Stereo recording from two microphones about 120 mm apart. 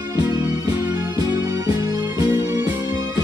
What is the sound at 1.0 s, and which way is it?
Music, 30° right (ahead or behind).